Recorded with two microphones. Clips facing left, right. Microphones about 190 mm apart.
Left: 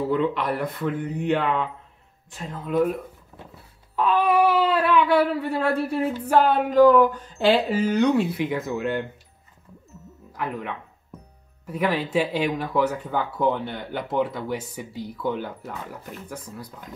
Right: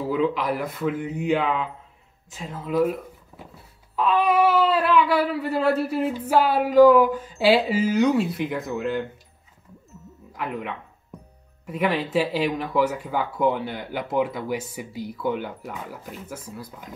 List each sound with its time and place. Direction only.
0.1 s speech: centre (ahead or behind)
10.3 s music: centre (ahead or behind)
11.6 s speech: centre (ahead or behind)